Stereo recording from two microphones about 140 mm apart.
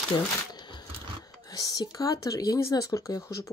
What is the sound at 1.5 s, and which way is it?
Speech, 25° left (ahead or behind).